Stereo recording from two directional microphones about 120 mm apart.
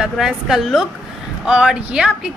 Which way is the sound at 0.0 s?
5° right (ahead or behind).